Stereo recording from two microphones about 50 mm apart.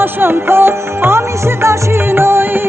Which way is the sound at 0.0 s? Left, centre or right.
Right.